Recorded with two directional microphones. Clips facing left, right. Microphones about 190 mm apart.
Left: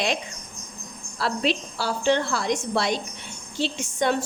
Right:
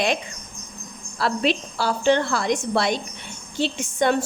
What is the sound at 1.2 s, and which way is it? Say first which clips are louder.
A woman's voice: right 3 dB; 60° right (ahead or behind).